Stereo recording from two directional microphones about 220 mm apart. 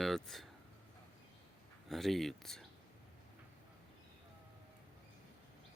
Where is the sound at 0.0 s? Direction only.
Centre (ahead or behind).